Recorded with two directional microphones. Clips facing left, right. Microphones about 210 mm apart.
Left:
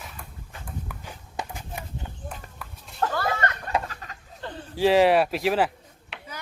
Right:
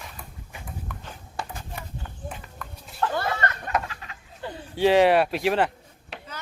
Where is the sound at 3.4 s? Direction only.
25° left (ahead or behind).